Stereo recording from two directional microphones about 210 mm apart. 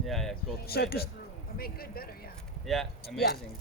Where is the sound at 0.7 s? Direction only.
50° left (ahead or behind).